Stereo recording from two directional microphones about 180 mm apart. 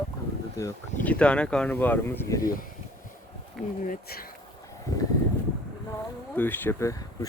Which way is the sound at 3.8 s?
55° left (ahead or behind).